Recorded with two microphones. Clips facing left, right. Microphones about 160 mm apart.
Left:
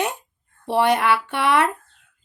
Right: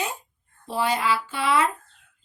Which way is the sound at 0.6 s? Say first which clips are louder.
Left 6 dB; 70° left (ahead or behind).